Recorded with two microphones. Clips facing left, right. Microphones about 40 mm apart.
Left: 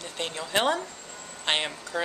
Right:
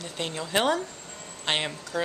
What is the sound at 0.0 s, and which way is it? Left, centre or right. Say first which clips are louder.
A woman's voice: right 1 dB; centre.